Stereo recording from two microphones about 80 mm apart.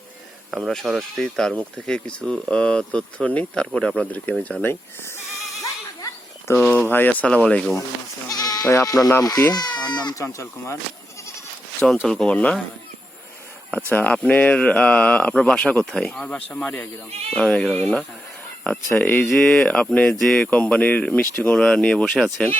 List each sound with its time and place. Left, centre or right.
0.5 s speech: centre
6.5 s speech: left
8.3 s sheep: left
9.2 s speech: left
12.0 s speech: centre
13.7 s speech: centre
19.0 s speech: left
19.3 s speech: centre